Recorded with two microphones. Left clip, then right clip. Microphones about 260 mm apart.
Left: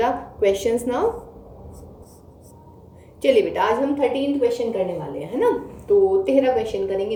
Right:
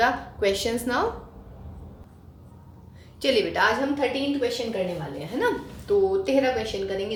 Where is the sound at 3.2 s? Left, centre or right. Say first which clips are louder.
Left 4 dB; right.